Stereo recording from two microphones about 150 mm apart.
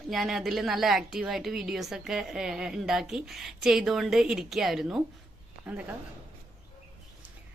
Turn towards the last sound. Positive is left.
turn(degrees=-10)  # may be behind; listen again after turning